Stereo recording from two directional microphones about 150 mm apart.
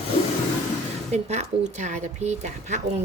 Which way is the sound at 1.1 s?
50° right (ahead or behind).